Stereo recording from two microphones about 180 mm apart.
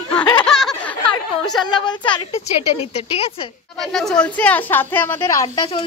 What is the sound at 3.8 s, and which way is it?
A woman's voice, centre (ahead or behind).